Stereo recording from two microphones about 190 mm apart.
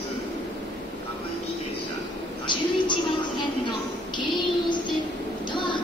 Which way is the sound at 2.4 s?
25° left (ahead or behind).